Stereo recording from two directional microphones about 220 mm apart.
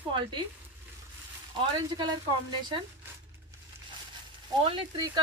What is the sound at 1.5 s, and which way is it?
Speech, 20° right (ahead or behind).